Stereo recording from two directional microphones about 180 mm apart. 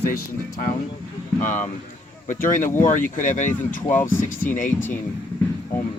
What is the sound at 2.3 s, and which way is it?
Speech, 45° left (ahead or behind).